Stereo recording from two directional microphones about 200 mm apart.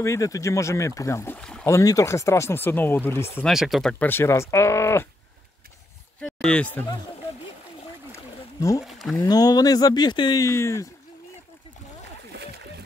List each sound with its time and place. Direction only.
0.0 s speech: 15° left (ahead or behind)
1.7 s speech: 15° left (ahead or behind)
3.4 s speech: centre (ahead or behind)
6.2 s speech: 5° left (ahead or behind)
8.5 s speech: 15° left (ahead or behind)
8.8 s speech: centre (ahead or behind)
9.2 s speech: 20° left (ahead or behind)
12.3 s a sound: 55° right (ahead or behind)